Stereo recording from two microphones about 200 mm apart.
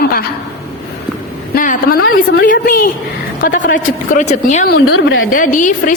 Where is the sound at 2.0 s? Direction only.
80° left.